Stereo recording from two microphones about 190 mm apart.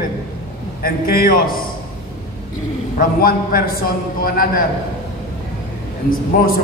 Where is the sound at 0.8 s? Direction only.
50° left (ahead or behind).